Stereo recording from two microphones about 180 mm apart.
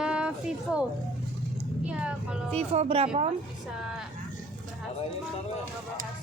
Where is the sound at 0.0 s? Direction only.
5° right (ahead or behind).